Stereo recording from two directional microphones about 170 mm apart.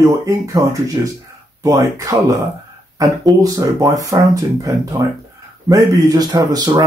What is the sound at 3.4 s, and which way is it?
Speech, 20° right (ahead or behind).